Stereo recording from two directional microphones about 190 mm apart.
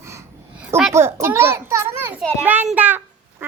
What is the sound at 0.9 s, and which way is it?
A child's voice, 15° right (ahead or behind).